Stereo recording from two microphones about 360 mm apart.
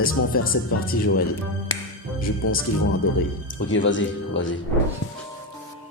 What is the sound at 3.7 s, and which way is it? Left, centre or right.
Speech, left.